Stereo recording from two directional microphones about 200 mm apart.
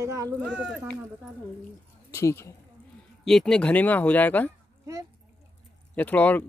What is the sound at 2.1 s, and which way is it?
Speech, 15° left (ahead or behind).